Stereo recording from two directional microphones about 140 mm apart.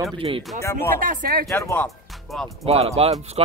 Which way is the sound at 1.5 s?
15° left (ahead or behind).